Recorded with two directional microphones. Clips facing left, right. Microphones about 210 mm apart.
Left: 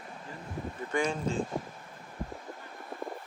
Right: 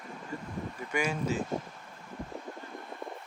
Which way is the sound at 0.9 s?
10° right (ahead or behind).